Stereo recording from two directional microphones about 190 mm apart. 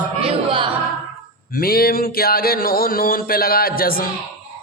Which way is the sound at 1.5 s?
50° left (ahead or behind).